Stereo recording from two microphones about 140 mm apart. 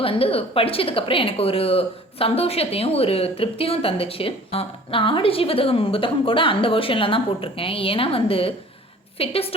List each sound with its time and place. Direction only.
0.0 s a woman's voice: 40° left (ahead or behind)